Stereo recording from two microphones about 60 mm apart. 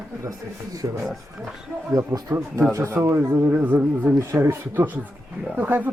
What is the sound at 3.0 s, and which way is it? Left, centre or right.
Speech, right.